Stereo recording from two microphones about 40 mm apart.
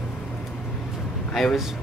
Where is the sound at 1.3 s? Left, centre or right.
Centre.